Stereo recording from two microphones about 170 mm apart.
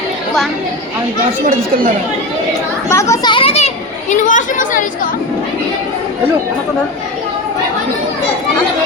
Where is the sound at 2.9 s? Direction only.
15° left (ahead or behind).